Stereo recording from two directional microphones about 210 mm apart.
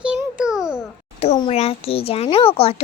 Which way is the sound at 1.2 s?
30° left (ahead or behind).